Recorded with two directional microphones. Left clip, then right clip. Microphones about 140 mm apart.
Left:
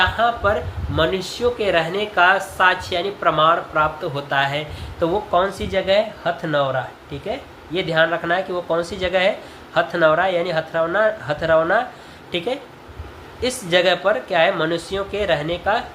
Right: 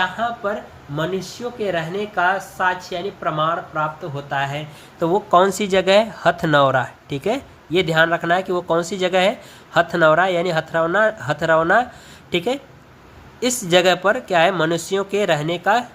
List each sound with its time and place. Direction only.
0.0 s speech: 20° right (ahead or behind)
4.9 s speech: 45° right (ahead or behind)
5.3 s speech: 70° right (ahead or behind)